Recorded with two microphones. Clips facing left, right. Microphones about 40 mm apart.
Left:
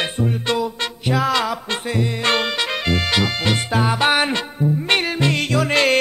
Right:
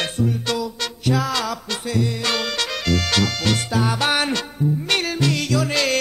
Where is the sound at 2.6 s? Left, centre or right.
Left.